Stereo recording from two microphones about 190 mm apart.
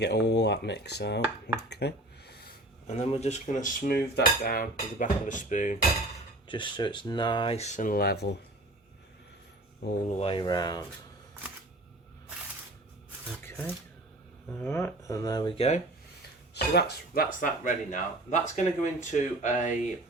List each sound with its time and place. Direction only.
0.0 s speech: 60° left (ahead or behind)
2.8 s cutlery: 35° left (ahead or behind)
6.5 s speech: 25° left (ahead or behind); by 8.4 s 60° left (ahead or behind)
9.8 s speech: 55° left (ahead or behind)
10.2 s speech: 30° left (ahead or behind)
14.5 s speech: 15° left (ahead or behind); by 15.8 s 30° left (ahead or behind)
16.6 s speech: 55° left (ahead or behind); by 19.7 s 40° left (ahead or behind)